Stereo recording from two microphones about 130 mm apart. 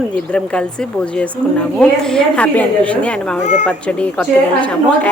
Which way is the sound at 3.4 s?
65° left (ahead or behind).